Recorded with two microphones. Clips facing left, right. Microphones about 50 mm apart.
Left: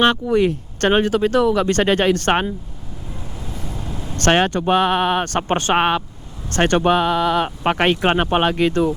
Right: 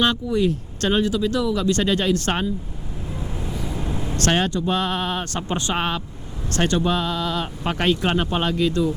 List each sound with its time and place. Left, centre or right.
0.0 s speech: left
3.5 s vehicle: right
3.8 s vehicle: centre
4.2 s speech: left